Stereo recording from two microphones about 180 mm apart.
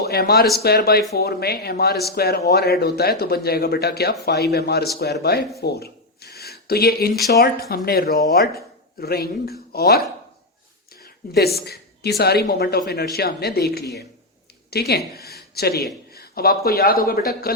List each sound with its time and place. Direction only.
0.0 s speech: 65° left (ahead or behind)
5.5 s a sound: 60° left (ahead or behind)
7.3 s speech: 60° left (ahead or behind)
11.0 s a woman's voice: 60° left (ahead or behind)
15.3 s a sound: 60° left (ahead or behind)
16.1 s speech: 60° left (ahead or behind)